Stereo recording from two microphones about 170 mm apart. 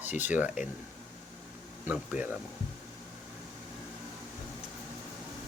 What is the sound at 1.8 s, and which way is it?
Speech, 5° right (ahead or behind).